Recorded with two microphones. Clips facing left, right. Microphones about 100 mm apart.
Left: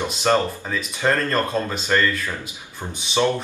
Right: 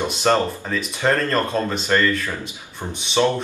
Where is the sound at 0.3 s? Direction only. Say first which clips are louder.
Right 1 dB; centre (ahead or behind).